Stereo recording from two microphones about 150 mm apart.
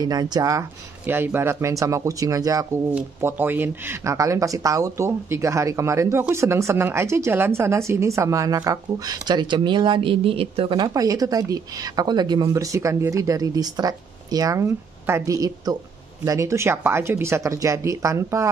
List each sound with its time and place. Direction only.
0.0 s speech: 25° right (ahead or behind)